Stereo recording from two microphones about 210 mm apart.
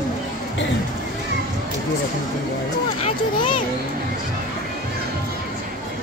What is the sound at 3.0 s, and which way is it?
Speech, 25° left (ahead or behind).